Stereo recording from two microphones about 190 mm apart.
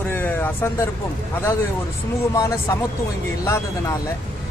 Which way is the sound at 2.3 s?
15° left (ahead or behind).